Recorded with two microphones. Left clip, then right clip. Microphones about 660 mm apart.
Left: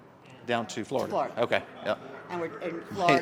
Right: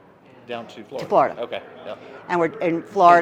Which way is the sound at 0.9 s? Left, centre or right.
Right.